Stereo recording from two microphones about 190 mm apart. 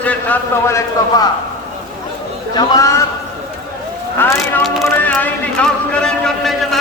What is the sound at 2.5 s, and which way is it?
Speech, 20° left (ahead or behind).